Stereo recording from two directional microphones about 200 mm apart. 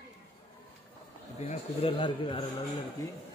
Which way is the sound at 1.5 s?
30° left (ahead or behind).